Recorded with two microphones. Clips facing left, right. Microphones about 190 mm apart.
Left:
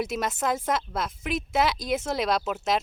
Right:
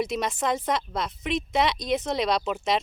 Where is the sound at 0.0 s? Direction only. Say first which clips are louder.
Right 1 dB; 5° left (ahead or behind).